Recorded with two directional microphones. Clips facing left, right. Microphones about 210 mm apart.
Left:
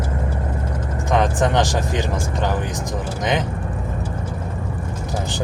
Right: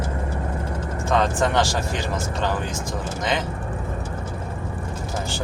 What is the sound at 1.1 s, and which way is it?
Speech, 15° left (ahead or behind).